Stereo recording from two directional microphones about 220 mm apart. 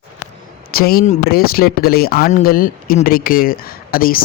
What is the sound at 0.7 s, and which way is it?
Speech, 40° left (ahead or behind).